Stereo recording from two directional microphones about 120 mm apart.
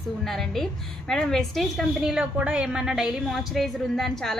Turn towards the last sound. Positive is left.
turn(degrees=5)  # may be behind; listen again after turning